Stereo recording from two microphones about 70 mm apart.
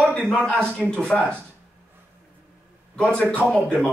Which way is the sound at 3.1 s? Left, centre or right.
Centre.